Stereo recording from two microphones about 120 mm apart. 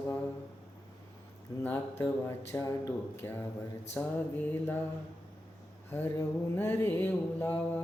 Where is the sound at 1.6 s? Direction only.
15° left (ahead or behind).